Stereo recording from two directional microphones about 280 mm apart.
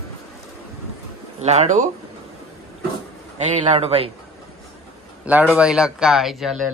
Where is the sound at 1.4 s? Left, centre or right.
Right.